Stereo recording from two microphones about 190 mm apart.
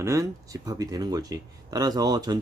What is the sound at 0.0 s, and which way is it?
Speech, 15° right (ahead or behind).